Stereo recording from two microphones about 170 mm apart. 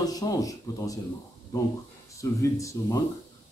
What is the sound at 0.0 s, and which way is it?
Speech, 20° left (ahead or behind).